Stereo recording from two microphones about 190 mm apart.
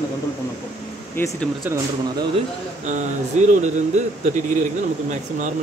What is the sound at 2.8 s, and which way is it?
Speech, 40° right (ahead or behind).